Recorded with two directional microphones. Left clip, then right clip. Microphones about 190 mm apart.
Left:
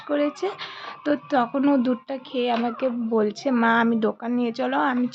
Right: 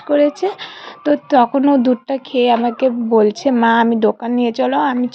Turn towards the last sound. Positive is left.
turn(degrees=-25)  # may be behind; listen again after turning